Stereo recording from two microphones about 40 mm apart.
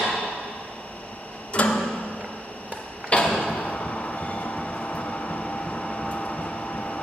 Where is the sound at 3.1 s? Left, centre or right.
Left.